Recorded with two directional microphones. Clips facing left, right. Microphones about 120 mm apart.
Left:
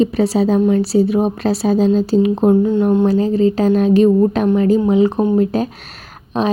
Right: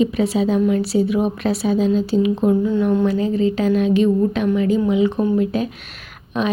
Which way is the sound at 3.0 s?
35° left (ahead or behind).